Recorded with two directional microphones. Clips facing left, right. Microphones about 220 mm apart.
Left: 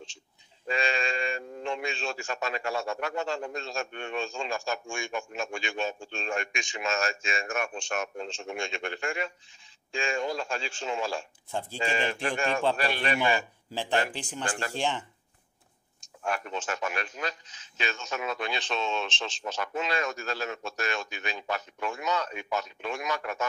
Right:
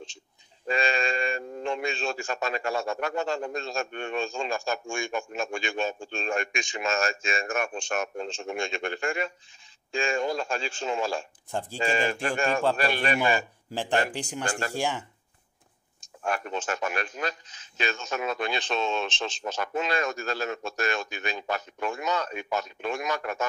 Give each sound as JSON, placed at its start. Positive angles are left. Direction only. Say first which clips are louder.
{"t": 0.7, "sound": "a man's voice", "louder": "right 3 dB", "side_deg": -45}
{"t": 13.7, "sound": "speech", "louder": "right 2 dB", "side_deg": -15}
{"t": 14.4, "sound": "speech", "louder": "right 2 dB", "side_deg": -40}
{"t": 14.7, "sound": "speech", "louder": "right 1 dB", "side_deg": -10}
{"t": 16.3, "sound": "a man's voice", "louder": "right 2 dB", "side_deg": -50}